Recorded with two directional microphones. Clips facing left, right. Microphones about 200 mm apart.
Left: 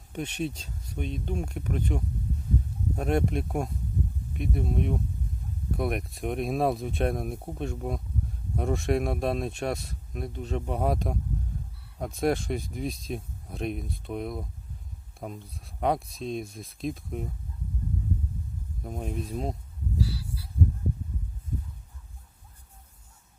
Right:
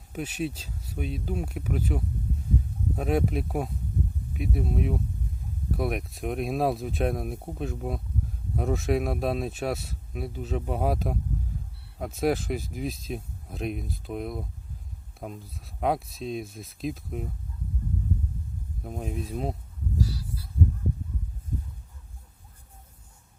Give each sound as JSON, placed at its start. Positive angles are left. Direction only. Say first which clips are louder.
{"t": 0.1, "sound": "speech", "louder": "right 1 dB", "side_deg": -5}
{"t": 18.8, "sound": "speech", "louder": "even", "side_deg": 0}
{"t": 20.0, "sound": "a sound", "louder": "right 1 dB", "side_deg": -45}